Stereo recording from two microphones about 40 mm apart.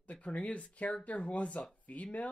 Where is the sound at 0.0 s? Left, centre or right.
Left.